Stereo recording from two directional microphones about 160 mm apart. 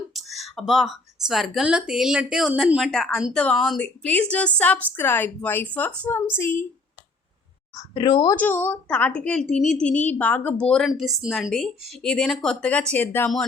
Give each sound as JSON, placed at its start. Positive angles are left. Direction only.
{"t": 0.1, "sound": "a woman's voice", "side_deg": 0}
{"t": 7.8, "sound": "a woman's voice", "side_deg": 30}
{"t": 8.4, "sound": "a woman's voice", "side_deg": 10}